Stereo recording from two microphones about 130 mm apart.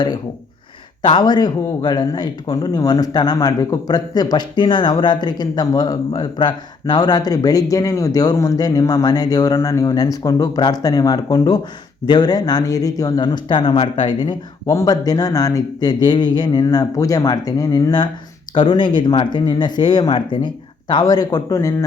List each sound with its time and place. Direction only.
1.0 s speech: 35° left (ahead or behind)
14.7 s speech: 25° left (ahead or behind)